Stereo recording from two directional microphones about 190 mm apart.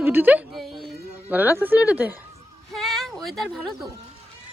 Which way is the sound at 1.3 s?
10° right (ahead or behind).